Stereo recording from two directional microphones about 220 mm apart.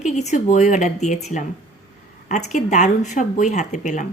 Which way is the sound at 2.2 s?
35° left (ahead or behind).